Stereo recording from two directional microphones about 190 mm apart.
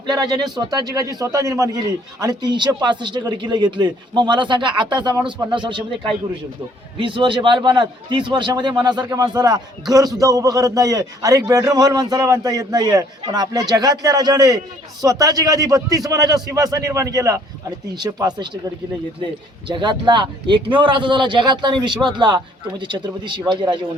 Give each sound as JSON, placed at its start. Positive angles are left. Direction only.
{"t": 0.1, "sound": "a man's voice", "side_deg": -20}